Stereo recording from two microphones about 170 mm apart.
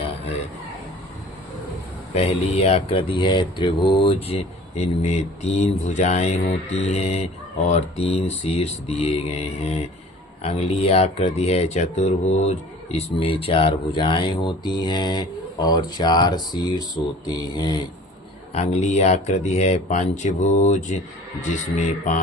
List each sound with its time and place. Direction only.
2.1 s speech: 35° left (ahead or behind)
18.5 s speech: 40° left (ahead or behind)